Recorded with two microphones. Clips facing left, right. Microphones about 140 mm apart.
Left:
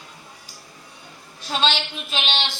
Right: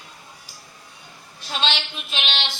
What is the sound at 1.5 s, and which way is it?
Speech, 40° left (ahead or behind).